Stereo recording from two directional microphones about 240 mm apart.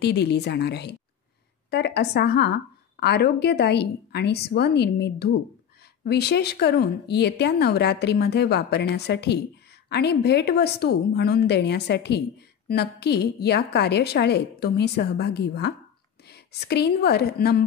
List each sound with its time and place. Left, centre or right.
0.0 s a woman's voice: left